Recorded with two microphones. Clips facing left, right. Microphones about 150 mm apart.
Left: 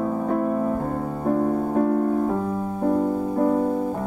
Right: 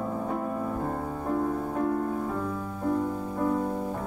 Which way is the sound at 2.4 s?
40° left (ahead or behind).